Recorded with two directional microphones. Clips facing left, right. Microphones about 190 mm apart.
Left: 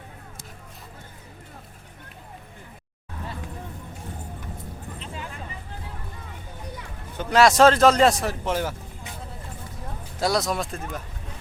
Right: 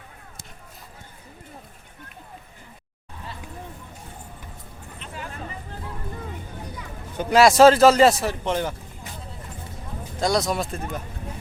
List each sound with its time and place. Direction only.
4.9 s a sound: 20° left (ahead or behind)
7.2 s speech: 10° right (ahead or behind)
10.2 s speech: 5° left (ahead or behind)